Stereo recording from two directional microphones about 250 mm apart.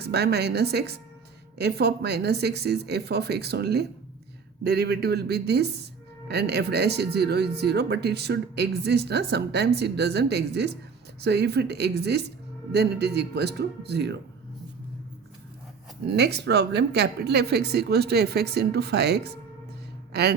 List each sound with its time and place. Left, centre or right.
0.0 s speech: right
16.0 s speech: right